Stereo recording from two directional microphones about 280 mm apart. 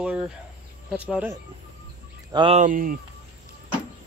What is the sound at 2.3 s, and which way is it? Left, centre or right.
Speech, right.